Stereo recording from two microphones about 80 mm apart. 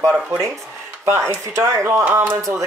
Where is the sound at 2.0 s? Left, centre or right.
Right.